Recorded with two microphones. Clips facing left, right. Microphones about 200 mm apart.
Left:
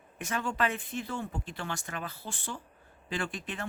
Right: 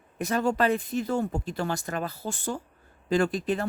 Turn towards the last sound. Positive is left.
turn(degrees=-35)  # may be behind; listen again after turning